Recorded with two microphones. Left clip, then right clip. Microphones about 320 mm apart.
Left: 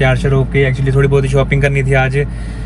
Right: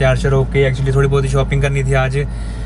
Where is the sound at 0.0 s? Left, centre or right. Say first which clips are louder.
Left 1 dB; centre.